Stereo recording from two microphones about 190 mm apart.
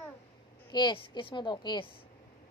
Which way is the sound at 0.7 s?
25° left (ahead or behind).